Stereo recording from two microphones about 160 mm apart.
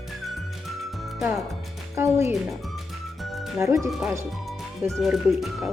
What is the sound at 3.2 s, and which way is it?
Music, centre (ahead or behind).